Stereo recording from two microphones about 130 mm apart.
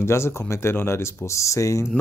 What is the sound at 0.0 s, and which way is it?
Speech, 20° left (ahead or behind).